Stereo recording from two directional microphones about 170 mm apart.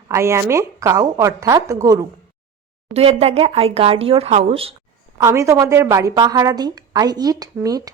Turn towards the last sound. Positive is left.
turn(degrees=-20)  # may be behind; listen again after turning